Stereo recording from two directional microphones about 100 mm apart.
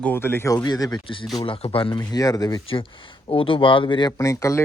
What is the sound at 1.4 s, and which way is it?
Speech, 65° left (ahead or behind).